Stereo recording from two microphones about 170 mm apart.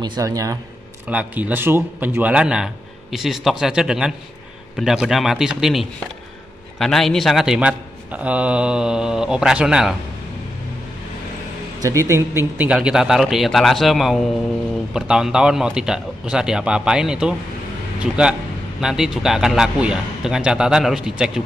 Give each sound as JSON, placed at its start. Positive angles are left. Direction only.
{"t": 0.0, "sound": "speech", "side_deg": -25}
{"t": 1.0, "sound": "speech", "side_deg": -10}
{"t": 11.8, "sound": "speech", "side_deg": -15}